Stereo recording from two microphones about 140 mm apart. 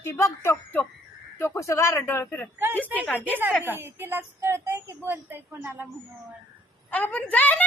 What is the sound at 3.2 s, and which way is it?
A child's voice, 15° right (ahead or behind).